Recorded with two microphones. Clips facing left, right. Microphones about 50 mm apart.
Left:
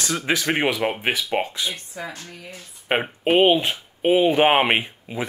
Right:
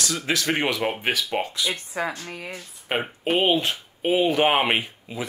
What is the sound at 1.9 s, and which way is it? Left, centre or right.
Speech, right.